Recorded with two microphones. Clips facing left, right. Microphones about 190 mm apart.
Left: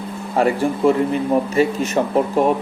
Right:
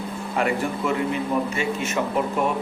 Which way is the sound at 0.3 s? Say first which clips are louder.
Left 6 dB; 35° left (ahead or behind).